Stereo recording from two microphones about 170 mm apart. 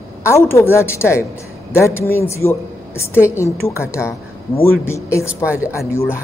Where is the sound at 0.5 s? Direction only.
15° left (ahead or behind).